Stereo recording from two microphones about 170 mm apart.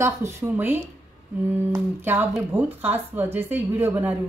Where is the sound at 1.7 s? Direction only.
15° right (ahead or behind).